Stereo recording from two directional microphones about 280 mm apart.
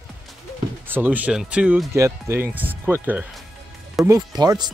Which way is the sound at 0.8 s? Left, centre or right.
Centre.